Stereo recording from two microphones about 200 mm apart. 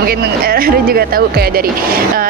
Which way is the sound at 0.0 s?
50° right (ahead or behind).